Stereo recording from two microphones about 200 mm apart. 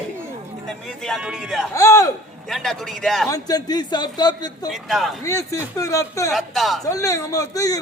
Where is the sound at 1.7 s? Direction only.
15° left (ahead or behind).